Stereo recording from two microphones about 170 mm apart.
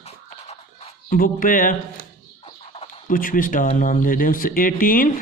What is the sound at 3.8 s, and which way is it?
Speech, 50° left (ahead or behind).